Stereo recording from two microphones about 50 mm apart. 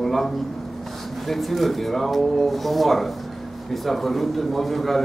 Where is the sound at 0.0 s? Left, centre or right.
Centre.